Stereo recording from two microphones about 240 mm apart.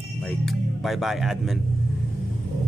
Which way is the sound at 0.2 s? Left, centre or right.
Centre.